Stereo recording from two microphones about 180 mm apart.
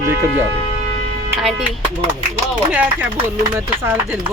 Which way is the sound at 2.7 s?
10° right (ahead or behind).